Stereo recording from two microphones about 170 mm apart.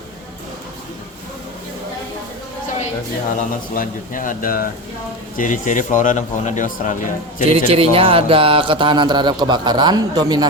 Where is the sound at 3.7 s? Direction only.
50° left (ahead or behind).